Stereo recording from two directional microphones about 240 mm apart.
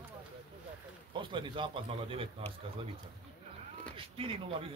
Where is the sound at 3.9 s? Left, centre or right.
Right.